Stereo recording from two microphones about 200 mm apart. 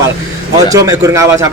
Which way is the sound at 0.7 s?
15° right (ahead or behind).